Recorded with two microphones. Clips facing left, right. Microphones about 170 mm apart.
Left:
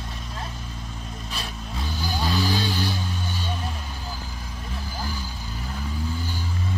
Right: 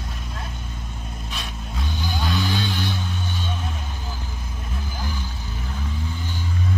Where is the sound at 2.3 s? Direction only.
35° left (ahead or behind).